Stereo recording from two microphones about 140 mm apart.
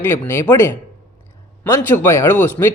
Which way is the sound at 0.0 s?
15° left (ahead or behind).